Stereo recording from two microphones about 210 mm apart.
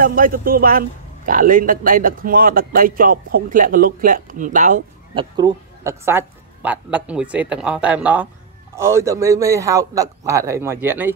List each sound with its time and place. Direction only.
0.0 s a man's voice: 40° right (ahead or behind)
5.1 s a woman's voice: 20° right (ahead or behind)